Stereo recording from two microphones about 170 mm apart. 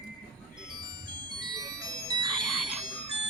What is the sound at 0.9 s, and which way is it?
Music, 25° right (ahead or behind).